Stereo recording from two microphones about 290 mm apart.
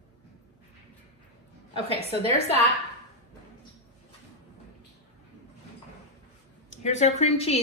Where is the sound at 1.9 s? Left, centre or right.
Right.